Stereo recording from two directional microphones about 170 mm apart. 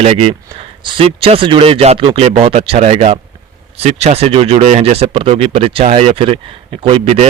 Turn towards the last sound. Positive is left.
turn(degrees=-35)  # may be behind; listen again after turning